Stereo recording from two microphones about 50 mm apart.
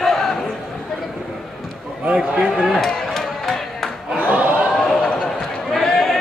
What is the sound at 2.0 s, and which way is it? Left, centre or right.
Speech, centre.